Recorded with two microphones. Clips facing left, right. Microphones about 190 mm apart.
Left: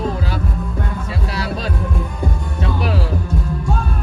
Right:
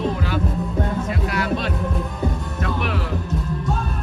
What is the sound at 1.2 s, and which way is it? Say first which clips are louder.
Music: even; 35° left (ahead or behind).